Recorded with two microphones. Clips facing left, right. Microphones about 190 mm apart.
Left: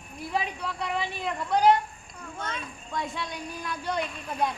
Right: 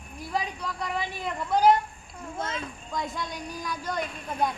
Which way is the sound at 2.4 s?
25° right (ahead or behind).